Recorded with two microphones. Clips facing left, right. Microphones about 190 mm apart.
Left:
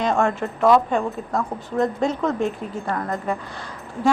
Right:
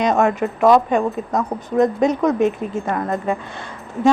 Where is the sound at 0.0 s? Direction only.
20° right (ahead or behind).